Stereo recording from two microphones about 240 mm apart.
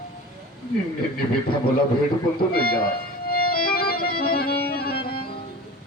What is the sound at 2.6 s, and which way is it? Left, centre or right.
Music, left.